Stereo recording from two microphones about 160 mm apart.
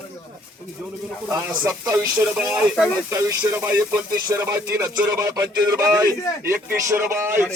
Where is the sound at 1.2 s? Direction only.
10° right (ahead or behind).